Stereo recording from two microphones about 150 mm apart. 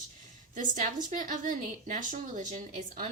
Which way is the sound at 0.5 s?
60° right (ahead or behind).